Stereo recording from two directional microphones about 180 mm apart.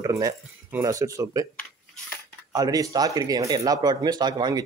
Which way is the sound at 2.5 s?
20° right (ahead or behind).